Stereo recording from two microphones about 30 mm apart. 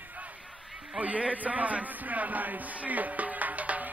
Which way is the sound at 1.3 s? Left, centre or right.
Right.